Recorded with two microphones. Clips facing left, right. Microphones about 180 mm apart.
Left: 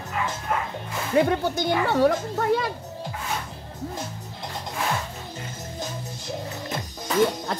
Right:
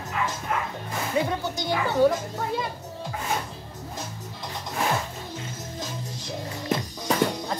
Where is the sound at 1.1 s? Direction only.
60° left (ahead or behind).